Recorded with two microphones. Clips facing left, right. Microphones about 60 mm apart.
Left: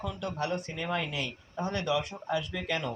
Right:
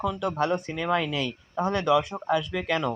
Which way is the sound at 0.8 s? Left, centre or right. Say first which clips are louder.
Right 8 dB; right.